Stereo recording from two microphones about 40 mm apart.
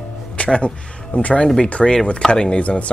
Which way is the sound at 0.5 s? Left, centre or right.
Left.